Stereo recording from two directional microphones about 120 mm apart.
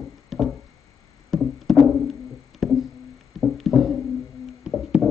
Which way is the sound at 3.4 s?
Centre (ahead or behind).